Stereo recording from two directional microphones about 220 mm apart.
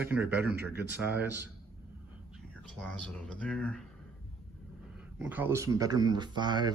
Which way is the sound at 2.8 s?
5° left (ahead or behind).